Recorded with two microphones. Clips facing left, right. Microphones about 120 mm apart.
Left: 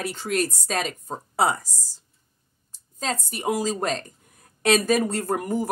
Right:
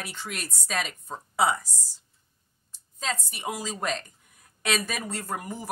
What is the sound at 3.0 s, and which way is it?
Speech, 40° left (ahead or behind).